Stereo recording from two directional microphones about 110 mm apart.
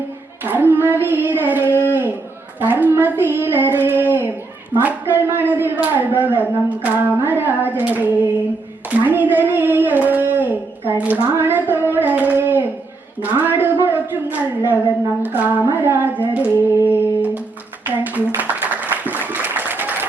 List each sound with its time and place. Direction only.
0.4 s child singing: 15° right (ahead or behind)
4.8 s speech: 15° right (ahead or behind)
16.3 s a sound: 15° right (ahead or behind)